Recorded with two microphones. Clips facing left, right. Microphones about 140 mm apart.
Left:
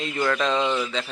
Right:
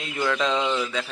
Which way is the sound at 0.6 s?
10° left (ahead or behind).